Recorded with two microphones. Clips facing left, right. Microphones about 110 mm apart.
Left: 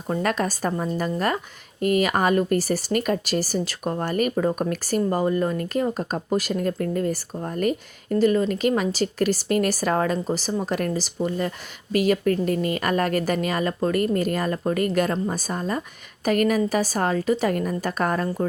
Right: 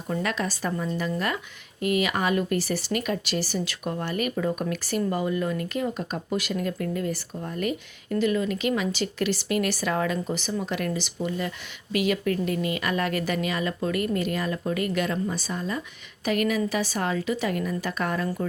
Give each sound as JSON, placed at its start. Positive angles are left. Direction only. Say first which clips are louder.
{"t": 0.1, "sound": "speech", "louder": "left 4 dB", "side_deg": 45}